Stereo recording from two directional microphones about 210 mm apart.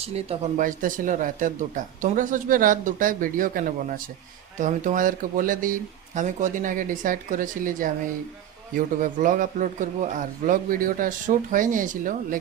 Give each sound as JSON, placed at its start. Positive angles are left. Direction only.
{"t": 0.0, "sound": "speech", "side_deg": -30}